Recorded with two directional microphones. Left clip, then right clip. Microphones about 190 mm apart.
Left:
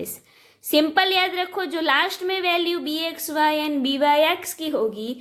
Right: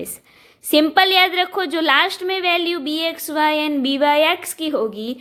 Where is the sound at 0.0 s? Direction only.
20° right (ahead or behind).